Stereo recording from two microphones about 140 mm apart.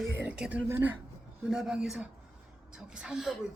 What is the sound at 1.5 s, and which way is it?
Chuckle, 5° right (ahead or behind).